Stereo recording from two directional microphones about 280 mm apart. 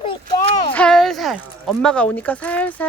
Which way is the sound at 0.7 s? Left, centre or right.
Centre.